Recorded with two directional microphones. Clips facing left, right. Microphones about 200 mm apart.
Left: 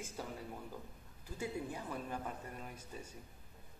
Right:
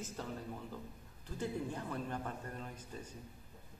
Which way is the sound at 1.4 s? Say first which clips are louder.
Right 2 dB; 10° left (ahead or behind).